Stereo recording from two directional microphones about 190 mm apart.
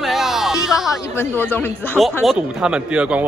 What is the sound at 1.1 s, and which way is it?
Speech, 10° left (ahead or behind).